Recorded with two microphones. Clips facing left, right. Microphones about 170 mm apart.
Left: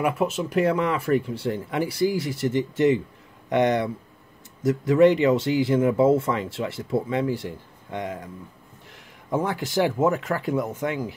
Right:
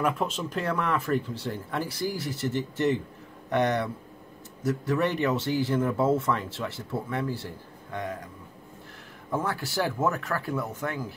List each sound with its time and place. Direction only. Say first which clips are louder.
0.0 s speech: left 4 dB; 10° left (ahead or behind)
5.0 s speech: left 11 dB; 15° left (ahead or behind)
9.3 s speech: left 5 dB; 20° left (ahead or behind)